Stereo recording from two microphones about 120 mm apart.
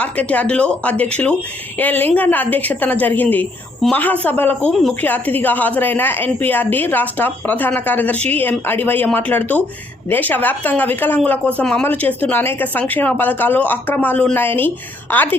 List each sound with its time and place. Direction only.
0.0 s speech: 10° left (ahead or behind)
4.7 s speech: centre (ahead or behind)
4.9 s speech: 15° left (ahead or behind)